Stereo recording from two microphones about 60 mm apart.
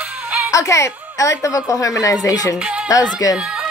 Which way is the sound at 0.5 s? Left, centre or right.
Left.